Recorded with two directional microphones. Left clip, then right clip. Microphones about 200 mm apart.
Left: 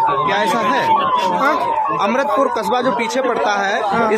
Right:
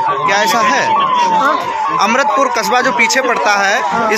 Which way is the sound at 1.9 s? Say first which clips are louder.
Right 8 dB; 5° left (ahead or behind).